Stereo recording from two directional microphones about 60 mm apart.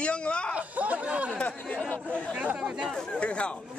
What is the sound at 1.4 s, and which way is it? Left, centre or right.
Speech, left.